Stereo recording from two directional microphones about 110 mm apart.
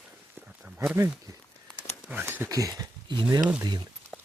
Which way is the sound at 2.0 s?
15° right (ahead or behind).